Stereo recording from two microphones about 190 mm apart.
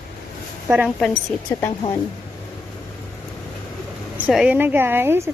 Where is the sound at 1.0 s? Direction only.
5° left (ahead or behind).